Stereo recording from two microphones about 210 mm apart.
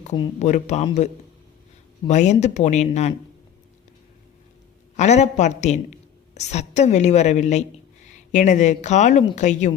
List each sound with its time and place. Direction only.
0.3 s a woman's voice: 35° left (ahead or behind)
4.9 s a woman's voice: 35° left (ahead or behind)